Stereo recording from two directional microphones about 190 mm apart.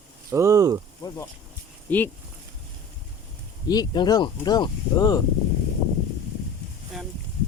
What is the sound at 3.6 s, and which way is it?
Speech, 20° left (ahead or behind).